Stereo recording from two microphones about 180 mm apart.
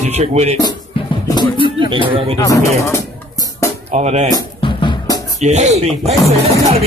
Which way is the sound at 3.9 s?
40° right (ahead or behind).